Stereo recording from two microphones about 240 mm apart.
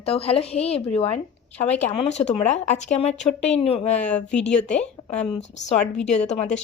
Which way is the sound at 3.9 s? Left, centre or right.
Centre.